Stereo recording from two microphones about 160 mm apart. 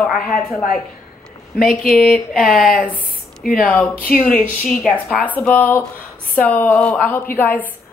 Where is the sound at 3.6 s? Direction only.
5° left (ahead or behind).